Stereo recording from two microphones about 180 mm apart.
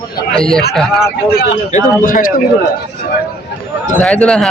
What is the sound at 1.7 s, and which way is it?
Speech, 50° left (ahead or behind).